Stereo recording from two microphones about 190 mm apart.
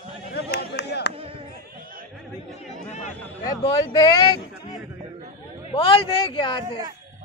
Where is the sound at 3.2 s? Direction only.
20° left (ahead or behind).